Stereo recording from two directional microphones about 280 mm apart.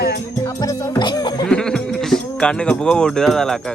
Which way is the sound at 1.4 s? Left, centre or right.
Centre.